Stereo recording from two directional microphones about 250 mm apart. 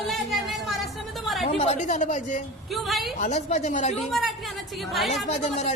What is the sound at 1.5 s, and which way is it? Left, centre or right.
Speech, left.